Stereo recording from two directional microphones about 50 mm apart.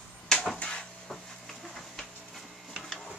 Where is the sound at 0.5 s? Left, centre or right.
Left.